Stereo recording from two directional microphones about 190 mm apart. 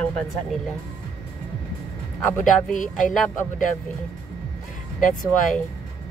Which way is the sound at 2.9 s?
Centre (ahead or behind).